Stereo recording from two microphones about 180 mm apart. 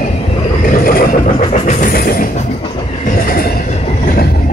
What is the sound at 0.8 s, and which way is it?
Vehicle, 55° left (ahead or behind).